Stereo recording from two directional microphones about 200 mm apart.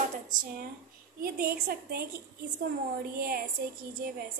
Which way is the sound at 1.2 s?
50° right (ahead or behind).